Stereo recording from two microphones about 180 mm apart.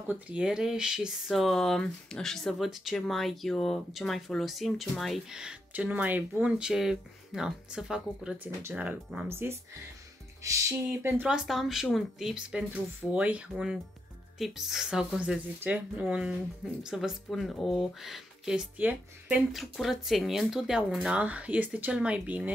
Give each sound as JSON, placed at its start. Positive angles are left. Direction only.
{"t": 0.1, "sound": "speech", "side_deg": -5}